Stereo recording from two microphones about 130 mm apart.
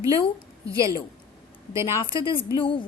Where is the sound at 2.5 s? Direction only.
40° left (ahead or behind).